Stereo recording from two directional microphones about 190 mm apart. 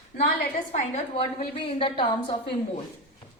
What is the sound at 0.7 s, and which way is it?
A woman's voice, 35° left (ahead or behind).